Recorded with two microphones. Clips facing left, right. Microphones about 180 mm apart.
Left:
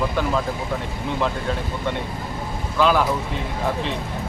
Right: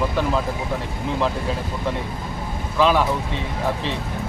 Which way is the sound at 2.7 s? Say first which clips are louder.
Even; centre (ahead or behind).